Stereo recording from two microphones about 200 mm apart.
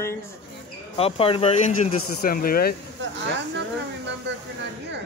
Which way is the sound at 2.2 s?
45° left (ahead or behind).